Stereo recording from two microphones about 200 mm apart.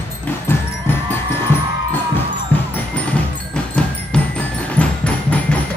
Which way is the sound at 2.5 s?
10° left (ahead or behind).